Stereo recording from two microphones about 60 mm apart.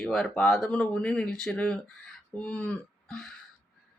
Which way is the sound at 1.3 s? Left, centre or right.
Centre.